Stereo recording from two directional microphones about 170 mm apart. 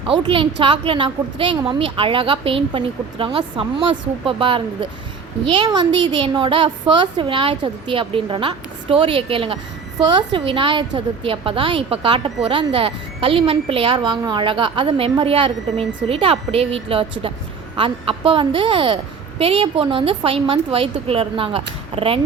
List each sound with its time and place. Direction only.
0.1 s a woman's voice: 30° right (ahead or behind)